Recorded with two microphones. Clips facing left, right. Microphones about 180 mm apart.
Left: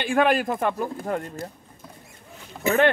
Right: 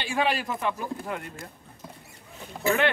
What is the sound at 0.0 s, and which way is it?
Speech, 55° left (ahead or behind).